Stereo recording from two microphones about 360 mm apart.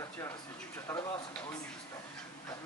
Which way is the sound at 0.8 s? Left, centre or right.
Centre.